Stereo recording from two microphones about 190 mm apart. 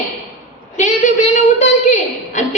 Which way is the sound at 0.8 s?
40° left (ahead or behind).